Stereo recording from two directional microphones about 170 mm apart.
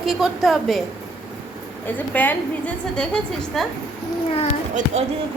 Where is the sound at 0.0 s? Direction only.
Centre (ahead or behind).